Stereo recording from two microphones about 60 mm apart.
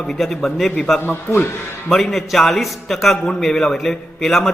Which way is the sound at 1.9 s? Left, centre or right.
Centre.